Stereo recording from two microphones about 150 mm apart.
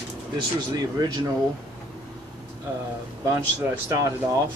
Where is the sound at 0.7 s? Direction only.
25° right (ahead or behind).